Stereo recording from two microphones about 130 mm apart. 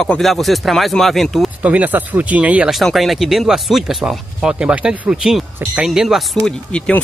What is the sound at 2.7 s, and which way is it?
Speech, centre (ahead or behind).